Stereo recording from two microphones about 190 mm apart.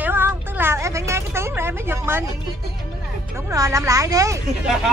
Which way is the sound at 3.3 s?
15° right (ahead or behind).